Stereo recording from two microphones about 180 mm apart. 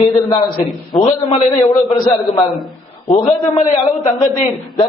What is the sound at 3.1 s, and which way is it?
Speech, 40° left (ahead or behind).